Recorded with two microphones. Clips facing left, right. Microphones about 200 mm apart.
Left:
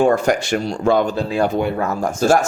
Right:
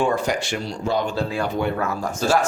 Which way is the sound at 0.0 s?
50° left (ahead or behind).